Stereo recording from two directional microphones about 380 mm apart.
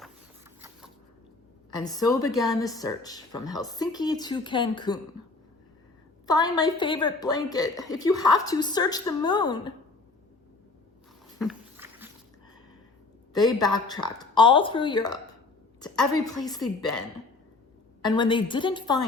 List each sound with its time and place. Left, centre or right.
1.7 s a woman's voice: centre
6.2 s a woman's voice: centre
11.3 s dog: centre
13.3 s a woman's voice: centre
18.0 s a woman's voice: centre